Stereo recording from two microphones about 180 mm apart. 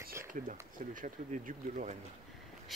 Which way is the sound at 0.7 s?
45° right (ahead or behind).